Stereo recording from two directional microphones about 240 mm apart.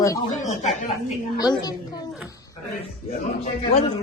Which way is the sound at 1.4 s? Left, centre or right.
Centre.